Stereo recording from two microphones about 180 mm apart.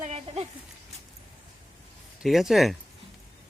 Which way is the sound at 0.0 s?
35° right (ahead or behind).